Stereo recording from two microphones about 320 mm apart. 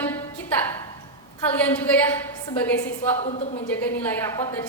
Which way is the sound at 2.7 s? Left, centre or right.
Left.